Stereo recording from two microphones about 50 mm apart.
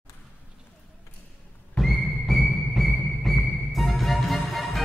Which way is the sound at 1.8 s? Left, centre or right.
Centre.